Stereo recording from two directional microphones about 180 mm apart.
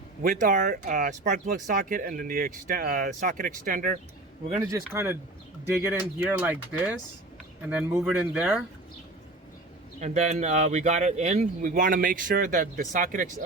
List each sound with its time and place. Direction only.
0.2 s speech: 50° right (ahead or behind)
4.9 s speech: 15° right (ahead or behind)
10.0 s speech: 40° right (ahead or behind)
11.7 s speech: 50° right (ahead or behind)